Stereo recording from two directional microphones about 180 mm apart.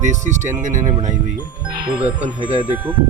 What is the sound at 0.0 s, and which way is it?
Speech, 40° right (ahead or behind).